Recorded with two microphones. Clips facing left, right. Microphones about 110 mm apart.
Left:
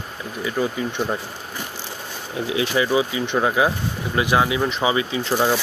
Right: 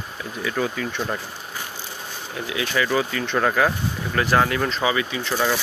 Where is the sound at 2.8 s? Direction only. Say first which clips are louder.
Left 2 dB; 15° left (ahead or behind).